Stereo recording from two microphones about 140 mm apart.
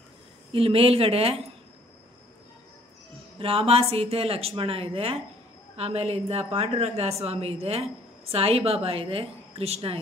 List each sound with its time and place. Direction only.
0.5 s a woman's voice: 40° right (ahead or behind)
3.3 s a woman's voice: 40° right (ahead or behind)